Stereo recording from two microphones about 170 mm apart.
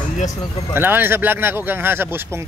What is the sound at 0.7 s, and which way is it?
Speech, 10° right (ahead or behind).